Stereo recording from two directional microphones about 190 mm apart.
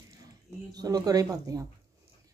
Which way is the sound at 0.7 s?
20° right (ahead or behind).